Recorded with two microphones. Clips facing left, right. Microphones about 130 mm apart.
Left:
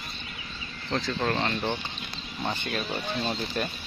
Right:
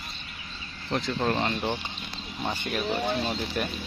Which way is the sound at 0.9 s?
15° right (ahead or behind).